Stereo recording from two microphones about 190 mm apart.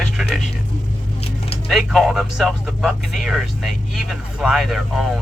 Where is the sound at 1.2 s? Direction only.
30° left (ahead or behind).